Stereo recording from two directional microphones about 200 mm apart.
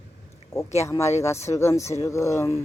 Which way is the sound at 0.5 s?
15° left (ahead or behind).